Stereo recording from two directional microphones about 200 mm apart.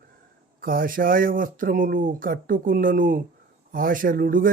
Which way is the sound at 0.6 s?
45° right (ahead or behind).